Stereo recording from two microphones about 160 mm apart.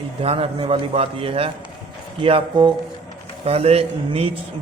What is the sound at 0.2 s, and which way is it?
A man's voice, 35° right (ahead or behind).